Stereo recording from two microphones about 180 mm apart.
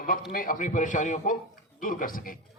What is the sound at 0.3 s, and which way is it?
A man's voice, 50° left (ahead or behind).